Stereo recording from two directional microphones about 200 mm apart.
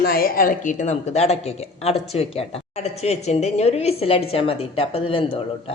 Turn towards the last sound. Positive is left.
turn(degrees=25)  # may be behind; listen again after turning